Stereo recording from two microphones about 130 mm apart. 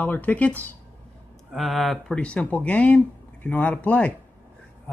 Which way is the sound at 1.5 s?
Centre (ahead or behind).